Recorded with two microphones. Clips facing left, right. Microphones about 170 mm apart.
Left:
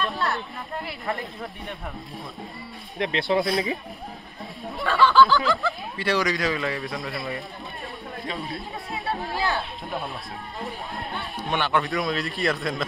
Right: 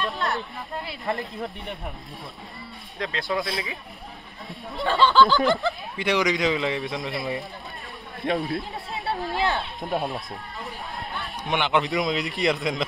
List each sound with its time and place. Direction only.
0.0 s a sound: 20° right (ahead or behind)
3.0 s speech: 20° left (ahead or behind)
4.8 s speech: 20° right (ahead or behind)
11.4 s a man's voice: 15° right (ahead or behind)